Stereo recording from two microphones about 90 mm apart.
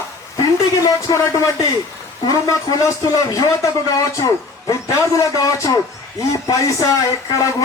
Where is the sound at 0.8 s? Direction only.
35° left (ahead or behind).